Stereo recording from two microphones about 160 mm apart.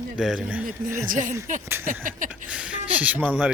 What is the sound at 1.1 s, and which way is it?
Speech, 55° right (ahead or behind).